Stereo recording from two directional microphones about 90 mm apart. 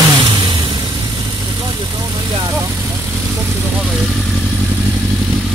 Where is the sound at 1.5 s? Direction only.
60° right (ahead or behind).